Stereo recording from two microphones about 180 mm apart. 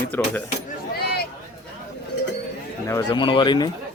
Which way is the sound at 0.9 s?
60° left (ahead or behind).